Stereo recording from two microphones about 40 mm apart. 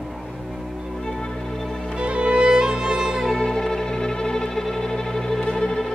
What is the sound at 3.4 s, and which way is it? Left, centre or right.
Music, centre.